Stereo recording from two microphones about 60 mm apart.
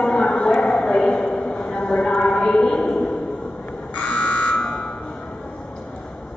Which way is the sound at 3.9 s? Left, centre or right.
Centre.